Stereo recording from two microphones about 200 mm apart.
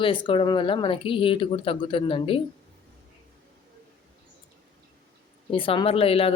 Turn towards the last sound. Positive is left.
turn(degrees=30)  # may be behind; listen again after turning